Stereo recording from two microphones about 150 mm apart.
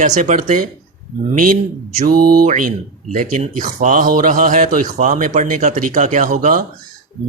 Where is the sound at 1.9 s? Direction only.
70° right (ahead or behind).